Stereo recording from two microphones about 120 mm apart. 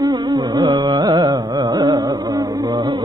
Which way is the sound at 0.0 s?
30° right (ahead or behind).